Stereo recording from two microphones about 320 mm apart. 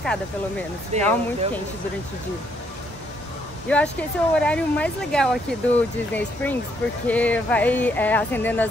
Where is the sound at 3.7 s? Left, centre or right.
Centre.